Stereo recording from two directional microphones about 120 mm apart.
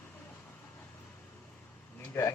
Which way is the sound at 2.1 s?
20° left (ahead or behind).